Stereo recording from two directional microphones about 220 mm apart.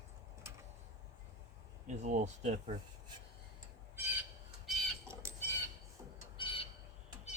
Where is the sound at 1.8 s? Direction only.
35° right (ahead or behind).